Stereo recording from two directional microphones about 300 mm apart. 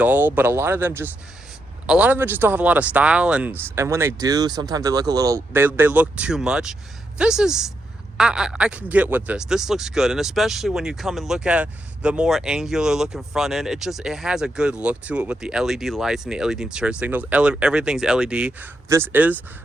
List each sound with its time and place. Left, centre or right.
0.0 s speech: centre